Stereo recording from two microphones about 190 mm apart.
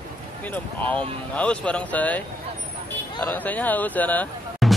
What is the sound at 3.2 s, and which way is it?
Speech, 10° left (ahead or behind).